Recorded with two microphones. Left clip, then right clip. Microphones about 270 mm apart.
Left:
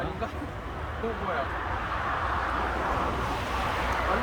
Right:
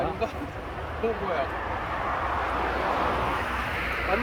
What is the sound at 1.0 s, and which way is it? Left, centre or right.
Vehicle, right.